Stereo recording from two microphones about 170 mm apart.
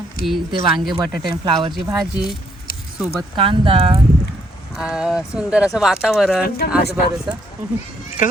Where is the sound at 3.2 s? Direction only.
30° right (ahead or behind).